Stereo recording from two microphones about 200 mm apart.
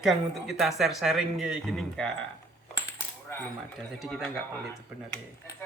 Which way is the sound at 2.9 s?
10° left (ahead or behind).